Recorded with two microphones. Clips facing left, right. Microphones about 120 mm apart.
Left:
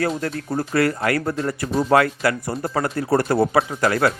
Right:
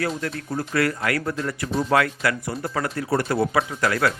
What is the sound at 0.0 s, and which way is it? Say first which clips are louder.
Speech: left 3 dB; 35° left (ahead or behind).